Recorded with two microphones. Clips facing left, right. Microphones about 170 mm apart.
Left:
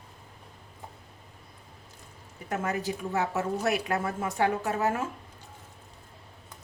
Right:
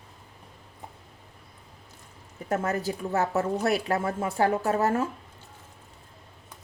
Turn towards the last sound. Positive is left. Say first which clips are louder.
# right 4 dB
turn(degrees=-40)  # may be behind; listen again after turning